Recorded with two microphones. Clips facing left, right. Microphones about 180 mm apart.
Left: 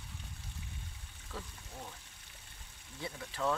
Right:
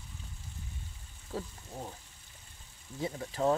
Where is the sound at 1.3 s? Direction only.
40° right (ahead or behind).